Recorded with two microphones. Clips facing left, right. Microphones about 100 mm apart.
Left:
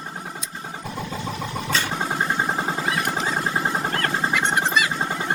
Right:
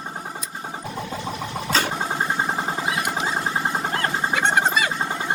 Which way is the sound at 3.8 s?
20° right (ahead or behind).